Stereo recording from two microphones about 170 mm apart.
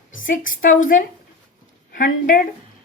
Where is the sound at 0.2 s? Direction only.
50° left (ahead or behind).